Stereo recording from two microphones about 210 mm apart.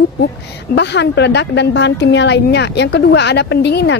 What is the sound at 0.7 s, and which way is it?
Speech, 55° left (ahead or behind).